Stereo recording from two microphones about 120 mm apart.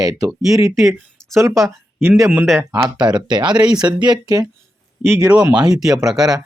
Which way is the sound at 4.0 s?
35° right (ahead or behind).